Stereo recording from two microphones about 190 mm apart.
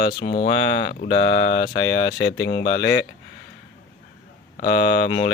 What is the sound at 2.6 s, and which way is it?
Speech, 55° left (ahead or behind).